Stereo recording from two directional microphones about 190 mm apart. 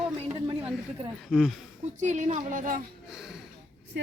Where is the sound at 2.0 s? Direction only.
40° right (ahead or behind).